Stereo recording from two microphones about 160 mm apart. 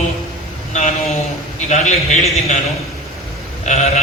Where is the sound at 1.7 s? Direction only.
45° left (ahead or behind).